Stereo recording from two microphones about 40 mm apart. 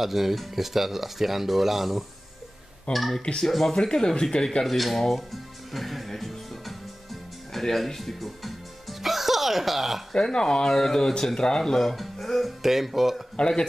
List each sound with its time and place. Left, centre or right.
0.0 s speech: centre
3.7 s speech: centre
4.6 s music: centre
7.5 s speech: centre
9.0 s a sound: centre
10.1 s speech: centre
13.4 s speech: centre